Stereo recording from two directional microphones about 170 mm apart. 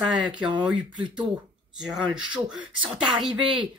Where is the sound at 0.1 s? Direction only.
5° right (ahead or behind).